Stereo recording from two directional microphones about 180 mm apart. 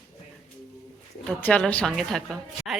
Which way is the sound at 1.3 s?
5° left (ahead or behind).